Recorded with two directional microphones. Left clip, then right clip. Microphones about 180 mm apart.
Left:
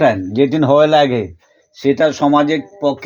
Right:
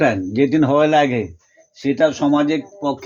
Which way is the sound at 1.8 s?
50° left (ahead or behind).